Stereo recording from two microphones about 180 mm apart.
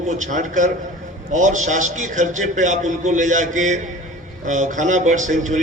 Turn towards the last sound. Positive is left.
turn(degrees=-45)  # may be behind; listen again after turning